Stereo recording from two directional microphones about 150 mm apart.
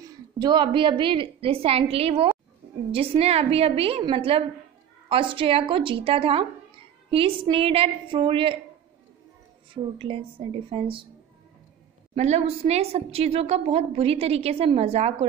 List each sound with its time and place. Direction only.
0.0 s a woman's voice: 30° right (ahead or behind)
9.9 s a woman's voice: 35° right (ahead or behind)
12.2 s a woman's voice: 45° right (ahead or behind)